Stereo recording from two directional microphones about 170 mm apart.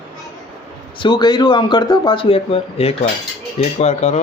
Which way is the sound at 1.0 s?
25° left (ahead or behind).